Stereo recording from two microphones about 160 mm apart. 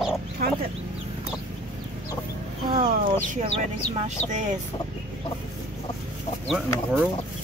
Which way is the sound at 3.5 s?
45° right (ahead or behind).